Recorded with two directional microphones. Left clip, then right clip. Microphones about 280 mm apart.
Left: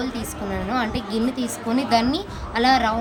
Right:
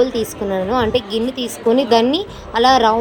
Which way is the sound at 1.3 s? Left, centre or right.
Centre.